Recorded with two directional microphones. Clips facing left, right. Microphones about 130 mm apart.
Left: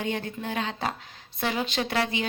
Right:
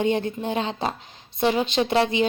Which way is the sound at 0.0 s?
25° right (ahead or behind).